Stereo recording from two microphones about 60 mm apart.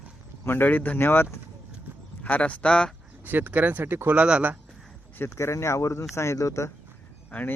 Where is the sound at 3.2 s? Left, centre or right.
Right.